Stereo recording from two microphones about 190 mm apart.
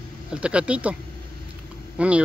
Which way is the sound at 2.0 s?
5° right (ahead or behind).